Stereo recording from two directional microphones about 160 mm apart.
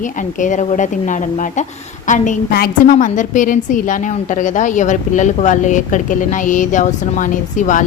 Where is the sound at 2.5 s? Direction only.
65° left (ahead or behind).